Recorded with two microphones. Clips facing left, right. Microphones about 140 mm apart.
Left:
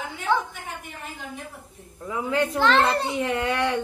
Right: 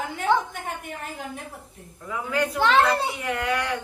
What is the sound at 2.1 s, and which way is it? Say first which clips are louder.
Speech: left 2 dB; 25° left (ahead or behind).